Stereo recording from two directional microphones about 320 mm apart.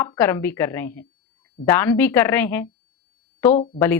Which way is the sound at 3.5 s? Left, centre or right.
Centre.